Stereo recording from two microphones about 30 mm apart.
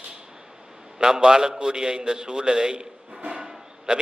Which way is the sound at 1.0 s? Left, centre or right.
Right.